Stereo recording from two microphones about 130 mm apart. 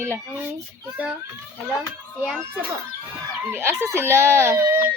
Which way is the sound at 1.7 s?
10° right (ahead or behind).